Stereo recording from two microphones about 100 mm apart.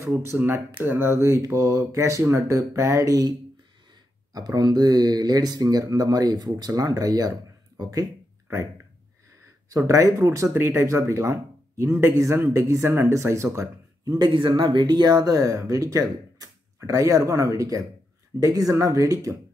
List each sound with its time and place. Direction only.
0.0 s speech: 25° right (ahead or behind); by 8.1 s 45° right (ahead or behind)
9.7 s speech: 35° right (ahead or behind)
14.1 s speech: 50° right (ahead or behind); by 19.3 s 35° right (ahead or behind)